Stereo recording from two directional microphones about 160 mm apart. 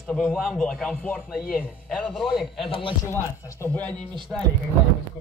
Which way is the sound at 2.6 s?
35° left (ahead or behind).